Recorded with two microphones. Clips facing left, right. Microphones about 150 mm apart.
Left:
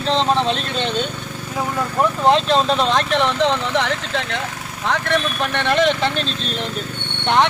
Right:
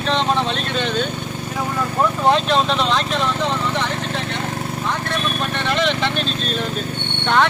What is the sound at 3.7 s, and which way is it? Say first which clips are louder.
Speech: left 2 dB; 90° left.